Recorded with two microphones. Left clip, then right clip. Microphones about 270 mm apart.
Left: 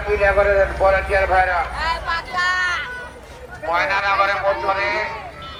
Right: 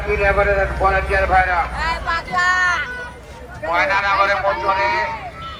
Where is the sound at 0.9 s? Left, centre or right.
Right.